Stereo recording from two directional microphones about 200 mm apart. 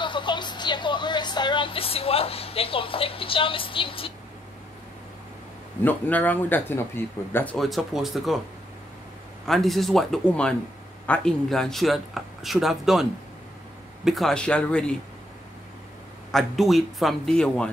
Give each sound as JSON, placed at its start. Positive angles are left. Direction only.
{"t": 0.0, "sound": "speech", "side_deg": 25}
{"t": 5.9, "sound": "a man's voice", "side_deg": 10}
{"t": 9.5, "sound": "a man's voice", "side_deg": 0}
{"t": 14.0, "sound": "a man's voice", "side_deg": 0}
{"t": 16.3, "sound": "a man's voice", "side_deg": 0}